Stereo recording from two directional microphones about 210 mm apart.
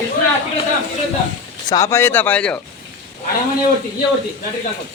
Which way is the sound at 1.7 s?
15° left (ahead or behind).